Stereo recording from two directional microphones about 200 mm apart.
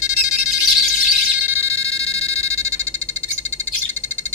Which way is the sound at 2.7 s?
5° left (ahead or behind).